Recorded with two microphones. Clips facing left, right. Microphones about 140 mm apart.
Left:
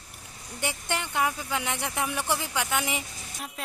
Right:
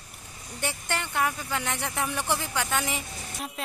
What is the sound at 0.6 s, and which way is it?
Speech, 15° left (ahead or behind).